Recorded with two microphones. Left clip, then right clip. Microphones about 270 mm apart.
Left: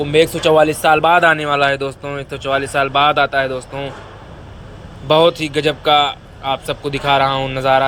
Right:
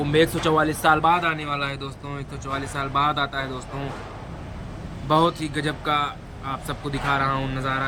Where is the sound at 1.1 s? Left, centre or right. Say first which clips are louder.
Left 11 dB; centre.